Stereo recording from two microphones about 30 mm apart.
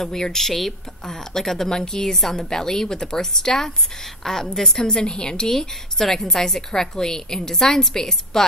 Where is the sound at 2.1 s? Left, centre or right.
Centre.